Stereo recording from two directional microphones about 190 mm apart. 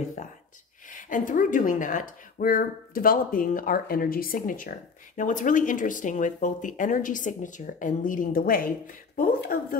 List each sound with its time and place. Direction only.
0.8 s speech: 45° left (ahead or behind)